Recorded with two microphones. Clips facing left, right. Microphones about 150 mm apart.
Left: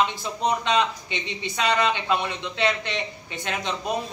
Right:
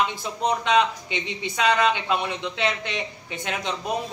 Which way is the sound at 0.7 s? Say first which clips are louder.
Right 3 dB; 15° right (ahead or behind).